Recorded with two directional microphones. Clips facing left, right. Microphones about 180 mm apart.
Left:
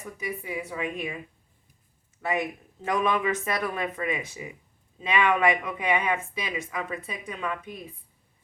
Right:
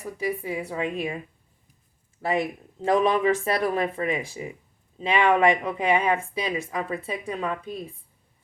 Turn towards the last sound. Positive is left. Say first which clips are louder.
# right 3 dB
turn(degrees=-30)  # may be behind; listen again after turning